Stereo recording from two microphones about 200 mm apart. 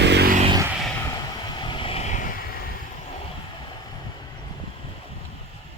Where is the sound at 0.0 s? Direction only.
55° right (ahead or behind).